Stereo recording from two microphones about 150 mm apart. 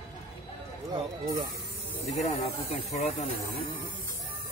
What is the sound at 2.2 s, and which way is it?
Speech, 45° left (ahead or behind).